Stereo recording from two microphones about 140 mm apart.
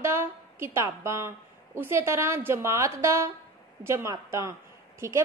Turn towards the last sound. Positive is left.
turn(degrees=-20)  # may be behind; listen again after turning